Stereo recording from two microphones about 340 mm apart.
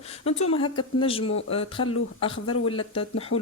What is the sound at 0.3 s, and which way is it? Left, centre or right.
Speech, centre.